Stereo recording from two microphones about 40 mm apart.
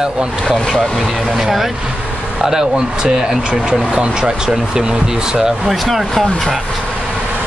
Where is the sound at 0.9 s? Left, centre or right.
Centre; by 3.0 s right.